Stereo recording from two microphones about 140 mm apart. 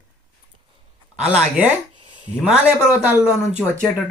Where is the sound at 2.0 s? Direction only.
35° right (ahead or behind).